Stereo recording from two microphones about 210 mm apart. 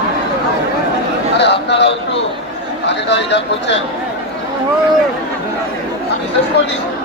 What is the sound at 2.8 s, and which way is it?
Speech, 55° left (ahead or behind).